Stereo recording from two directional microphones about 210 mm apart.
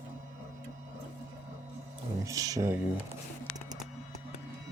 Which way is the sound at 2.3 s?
15° right (ahead or behind).